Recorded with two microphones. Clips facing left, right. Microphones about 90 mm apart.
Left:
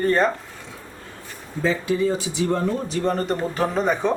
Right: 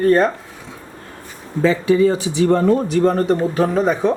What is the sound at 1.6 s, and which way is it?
Speech, 90° right.